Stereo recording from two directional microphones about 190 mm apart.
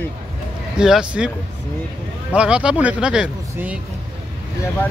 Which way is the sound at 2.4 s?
5° right (ahead or behind).